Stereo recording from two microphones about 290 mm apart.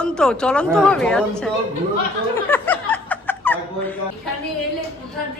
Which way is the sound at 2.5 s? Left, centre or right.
Centre.